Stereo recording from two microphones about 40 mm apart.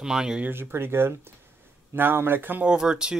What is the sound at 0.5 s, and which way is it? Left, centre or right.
Speech, right.